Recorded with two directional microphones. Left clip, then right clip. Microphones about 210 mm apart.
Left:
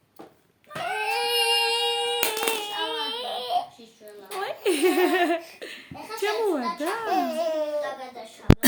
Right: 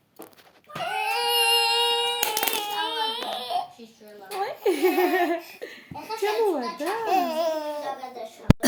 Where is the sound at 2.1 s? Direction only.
25° right (ahead or behind).